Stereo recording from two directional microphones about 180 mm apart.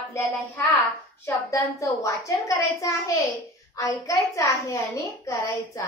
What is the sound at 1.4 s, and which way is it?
A woman's voice, 15° left (ahead or behind).